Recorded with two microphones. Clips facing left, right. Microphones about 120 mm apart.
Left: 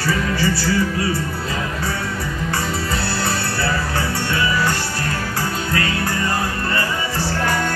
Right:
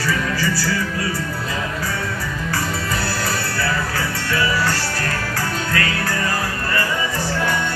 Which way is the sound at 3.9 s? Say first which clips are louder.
Left 1 dB; 25° left (ahead or behind).